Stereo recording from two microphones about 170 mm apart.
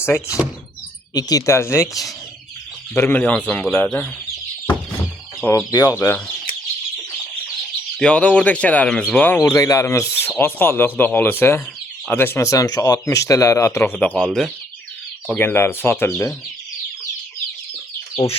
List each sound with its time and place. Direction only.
0.0 s speech: 15° left (ahead or behind)
2.9 s speech: 10° left (ahead or behind)
5.5 s speech: 20° left (ahead or behind)
7.9 s speech: 5° left (ahead or behind)
15.3 s speech: 10° left (ahead or behind)